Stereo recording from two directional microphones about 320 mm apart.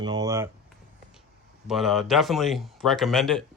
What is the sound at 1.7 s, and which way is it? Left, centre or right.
Speech, centre.